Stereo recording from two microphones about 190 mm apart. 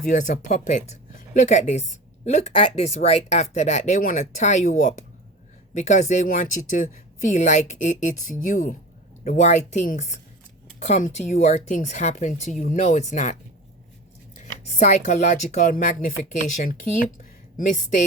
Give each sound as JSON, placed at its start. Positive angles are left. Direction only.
{"t": 0.0, "sound": "speech", "side_deg": 40}
{"t": 14.3, "sound": "speech", "side_deg": 40}